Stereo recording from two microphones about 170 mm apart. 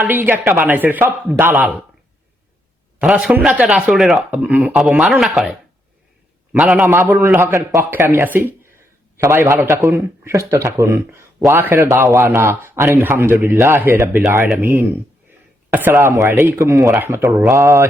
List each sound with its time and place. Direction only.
0.0 s speech: 10° right (ahead or behind)
3.0 s speech: 5° right (ahead or behind)
6.8 s speech: 15° right (ahead or behind)